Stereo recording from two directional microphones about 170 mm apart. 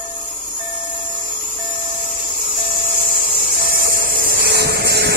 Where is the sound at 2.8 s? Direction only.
55° right (ahead or behind).